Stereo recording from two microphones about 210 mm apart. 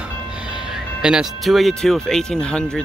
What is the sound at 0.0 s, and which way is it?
Speech, 5° right (ahead or behind).